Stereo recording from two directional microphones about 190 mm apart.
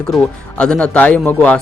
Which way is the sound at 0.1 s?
5° left (ahead or behind).